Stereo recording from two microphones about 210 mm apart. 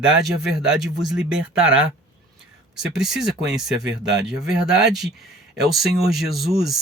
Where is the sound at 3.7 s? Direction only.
55° right (ahead or behind).